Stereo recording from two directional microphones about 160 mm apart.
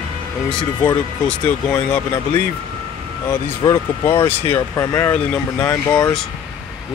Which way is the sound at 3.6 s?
25° left (ahead or behind).